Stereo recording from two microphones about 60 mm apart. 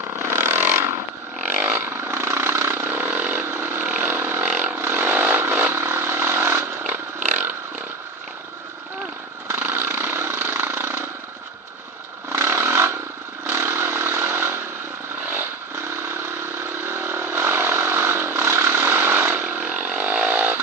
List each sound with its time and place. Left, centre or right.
0.2 s vehicle: right
4.2 s vehicle: right
4.4 s vehicle: right
4.7 s vehicle: right
6.8 s a sound: right
9.5 s a sound: right
12.3 s a sound: right
13.5 s vehicle: right
15.9 s vehicle: right